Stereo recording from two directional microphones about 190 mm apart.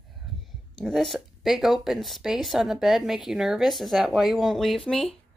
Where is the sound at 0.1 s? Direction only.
Centre (ahead or behind).